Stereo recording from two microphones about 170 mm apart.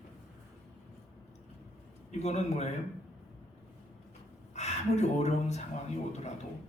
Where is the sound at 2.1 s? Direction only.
40° left (ahead or behind).